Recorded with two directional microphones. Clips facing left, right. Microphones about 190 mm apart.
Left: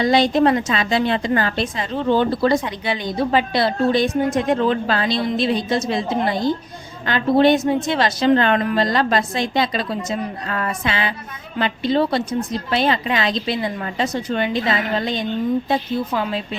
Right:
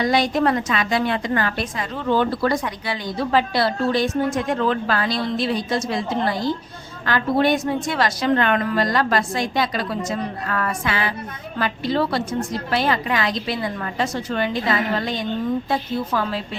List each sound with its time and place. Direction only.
0.0 s a woman's voice: 25° left (ahead or behind)